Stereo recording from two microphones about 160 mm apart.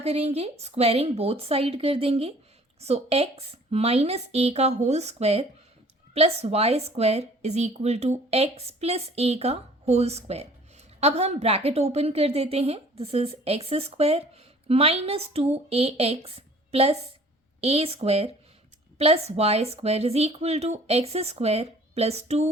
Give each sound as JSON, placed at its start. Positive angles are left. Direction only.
{"t": 0.0, "sound": "a woman's voice", "side_deg": -40}